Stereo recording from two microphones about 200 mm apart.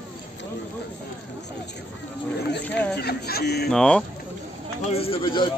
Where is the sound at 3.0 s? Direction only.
50° left (ahead or behind).